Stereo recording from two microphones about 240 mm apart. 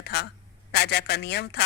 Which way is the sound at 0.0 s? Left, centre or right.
Left.